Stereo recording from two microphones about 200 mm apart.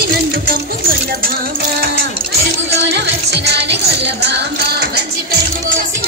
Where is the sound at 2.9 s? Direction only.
55° right (ahead or behind).